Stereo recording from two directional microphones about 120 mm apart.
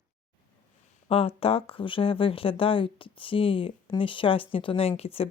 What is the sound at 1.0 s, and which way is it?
Speech, 55° left (ahead or behind).